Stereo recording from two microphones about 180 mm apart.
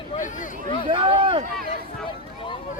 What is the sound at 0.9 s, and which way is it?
Speech, 30° right (ahead or behind).